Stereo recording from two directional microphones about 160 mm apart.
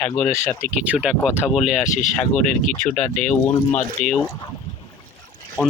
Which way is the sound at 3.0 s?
50° left (ahead or behind).